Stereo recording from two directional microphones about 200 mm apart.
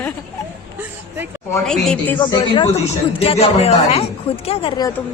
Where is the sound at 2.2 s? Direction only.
25° left (ahead or behind).